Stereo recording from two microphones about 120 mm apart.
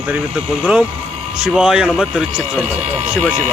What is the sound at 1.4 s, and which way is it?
A man's voice, 5° right (ahead or behind).